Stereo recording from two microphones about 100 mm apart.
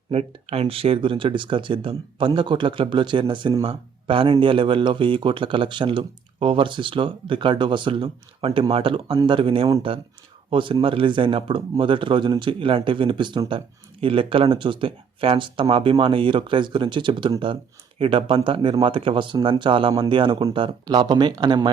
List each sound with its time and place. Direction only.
0.1 s speech: 90° right; by 13.4 s 50° right (ahead or behind)
14.0 s speech: 65° right (ahead or behind); by 21.7 s 50° right (ahead or behind)